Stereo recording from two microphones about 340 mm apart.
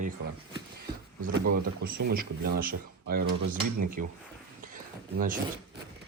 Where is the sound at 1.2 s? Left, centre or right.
Right.